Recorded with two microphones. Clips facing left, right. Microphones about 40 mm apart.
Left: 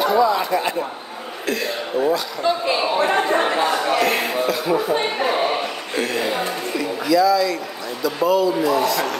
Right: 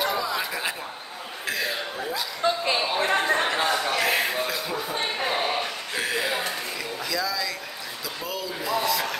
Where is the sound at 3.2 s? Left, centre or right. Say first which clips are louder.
Left 5 dB; centre.